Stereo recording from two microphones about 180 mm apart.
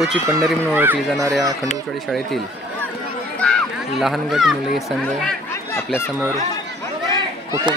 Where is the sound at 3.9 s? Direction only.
Centre (ahead or behind).